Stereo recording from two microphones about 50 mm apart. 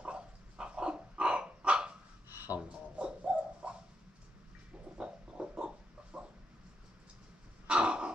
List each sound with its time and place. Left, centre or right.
0.0 s crow: centre
2.3 s a sound: right
3.0 s bird: right
4.9 s a sound: centre
6.1 s dog: right
7.6 s throat clearing: right